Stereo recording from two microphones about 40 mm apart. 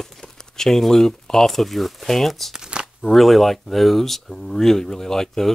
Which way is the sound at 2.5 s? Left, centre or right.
Right.